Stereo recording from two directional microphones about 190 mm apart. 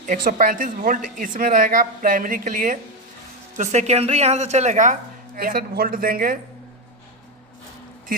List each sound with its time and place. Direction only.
0.0 s a woman's voice: 45° right (ahead or behind)